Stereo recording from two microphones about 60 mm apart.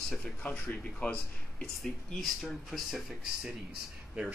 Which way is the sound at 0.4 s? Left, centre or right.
Left.